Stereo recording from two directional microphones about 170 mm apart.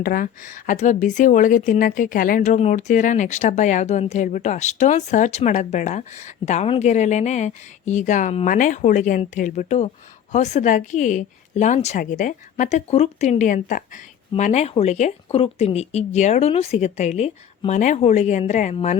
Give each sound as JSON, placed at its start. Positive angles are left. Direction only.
{"t": 0.0, "sound": "speech", "side_deg": 55}